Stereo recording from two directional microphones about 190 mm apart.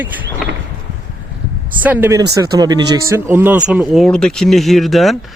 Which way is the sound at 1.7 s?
10° right (ahead or behind).